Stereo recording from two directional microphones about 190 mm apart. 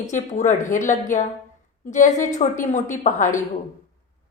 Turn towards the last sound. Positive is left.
turn(degrees=40)  # may be behind; listen again after turning